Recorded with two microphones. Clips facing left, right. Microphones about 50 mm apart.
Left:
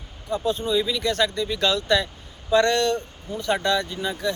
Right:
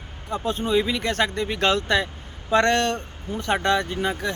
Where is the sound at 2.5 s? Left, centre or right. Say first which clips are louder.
Even; right.